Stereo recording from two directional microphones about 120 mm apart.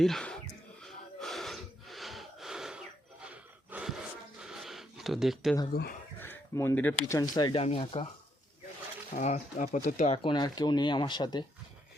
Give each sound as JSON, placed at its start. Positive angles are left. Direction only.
{"t": 0.0, "sound": "speech", "side_deg": 5}
{"t": 0.8, "sound": "gasp", "side_deg": 5}
{"t": 4.4, "sound": "a sound", "side_deg": -5}
{"t": 6.1, "sound": "speech", "side_deg": 15}
{"t": 7.2, "sound": "speech", "side_deg": 35}
{"t": 7.5, "sound": "speech", "side_deg": 55}
{"t": 9.1, "sound": "speech", "side_deg": 80}
{"t": 10.2, "sound": "speech", "side_deg": 35}